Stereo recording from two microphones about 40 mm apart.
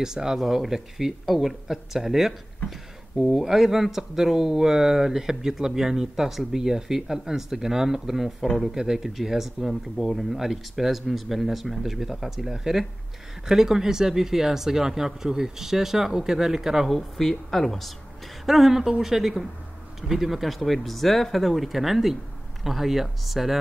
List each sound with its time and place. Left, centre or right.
0.0 s speech: centre
17.2 s speech: centre